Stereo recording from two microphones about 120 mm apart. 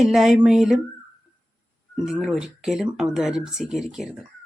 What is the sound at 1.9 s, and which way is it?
Speech, 5° right (ahead or behind).